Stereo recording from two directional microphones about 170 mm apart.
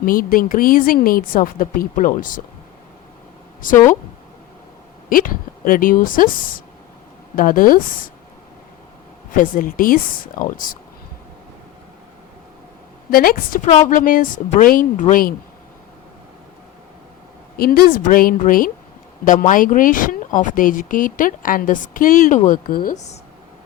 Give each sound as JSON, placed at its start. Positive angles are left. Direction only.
{"t": 0.0, "sound": "speech", "side_deg": 55}
{"t": 3.6, "sound": "speech", "side_deg": 55}
{"t": 5.0, "sound": "speech", "side_deg": 55}
{"t": 9.3, "sound": "speech", "side_deg": 55}
{"t": 13.1, "sound": "speech", "side_deg": 60}
{"t": 13.7, "sound": "speech", "side_deg": 40}
{"t": 13.9, "sound": "speech", "side_deg": 55}
{"t": 17.6, "sound": "speech", "side_deg": 60}